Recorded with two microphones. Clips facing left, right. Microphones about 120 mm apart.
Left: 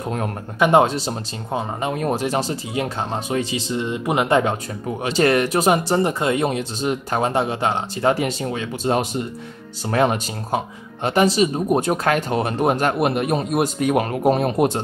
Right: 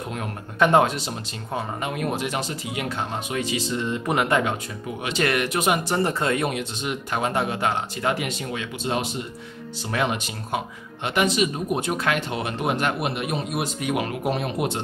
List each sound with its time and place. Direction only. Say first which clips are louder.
0.6 s speech: left 3 dB; 20° left (ahead or behind)
0.8 s speech: left 4 dB; 30° left (ahead or behind)
6.0 s speech: left 3 dB; 15° left (ahead or behind); by 14.8 s 40° left (ahead or behind)